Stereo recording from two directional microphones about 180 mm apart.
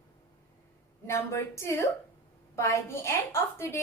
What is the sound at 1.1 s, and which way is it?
Speech, 15° left (ahead or behind).